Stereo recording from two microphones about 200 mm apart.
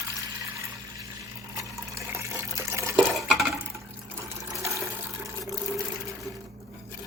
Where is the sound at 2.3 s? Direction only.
15° right (ahead or behind).